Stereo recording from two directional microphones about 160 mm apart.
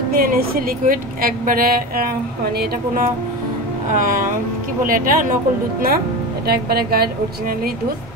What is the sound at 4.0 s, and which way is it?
Speech, 55° right (ahead or behind).